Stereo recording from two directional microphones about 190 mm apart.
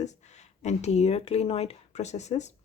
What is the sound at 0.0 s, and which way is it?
Speech, 35° left (ahead or behind).